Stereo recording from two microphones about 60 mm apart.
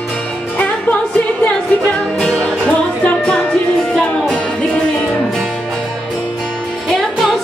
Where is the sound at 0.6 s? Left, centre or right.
Left.